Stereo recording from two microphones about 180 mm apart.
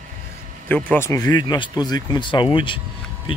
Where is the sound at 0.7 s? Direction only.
10° left (ahead or behind).